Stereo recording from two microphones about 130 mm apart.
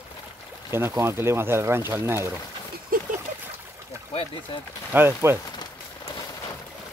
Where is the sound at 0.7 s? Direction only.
20° right (ahead or behind).